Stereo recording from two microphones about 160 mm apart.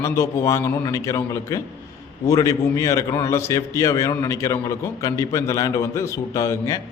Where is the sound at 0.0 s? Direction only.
20° left (ahead or behind).